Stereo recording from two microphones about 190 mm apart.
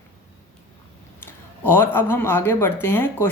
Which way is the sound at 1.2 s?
10° left (ahead or behind).